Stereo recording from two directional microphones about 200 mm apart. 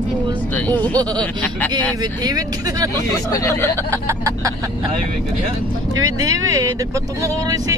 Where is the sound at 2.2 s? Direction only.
20° right (ahead or behind).